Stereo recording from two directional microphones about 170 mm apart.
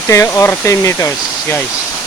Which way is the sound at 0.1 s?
15° left (ahead or behind).